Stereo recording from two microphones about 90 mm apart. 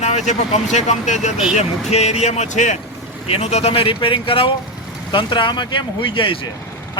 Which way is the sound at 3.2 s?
90° left.